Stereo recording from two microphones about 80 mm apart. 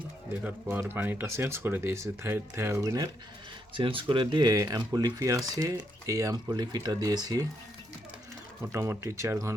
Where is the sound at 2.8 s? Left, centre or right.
Right.